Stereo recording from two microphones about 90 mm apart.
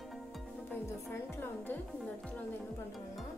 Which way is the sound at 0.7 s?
25° left (ahead or behind).